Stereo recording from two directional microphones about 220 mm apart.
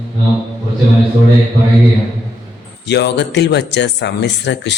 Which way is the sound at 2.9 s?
50° left (ahead or behind).